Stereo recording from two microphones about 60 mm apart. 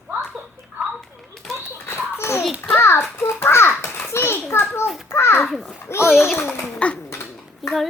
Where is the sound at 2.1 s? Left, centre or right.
Left.